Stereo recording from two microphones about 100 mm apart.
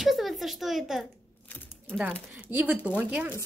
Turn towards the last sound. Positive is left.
turn(degrees=-10)  # may be behind; listen again after turning